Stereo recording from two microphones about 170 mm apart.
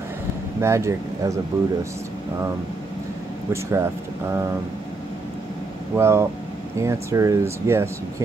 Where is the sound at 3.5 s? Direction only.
15° right (ahead or behind).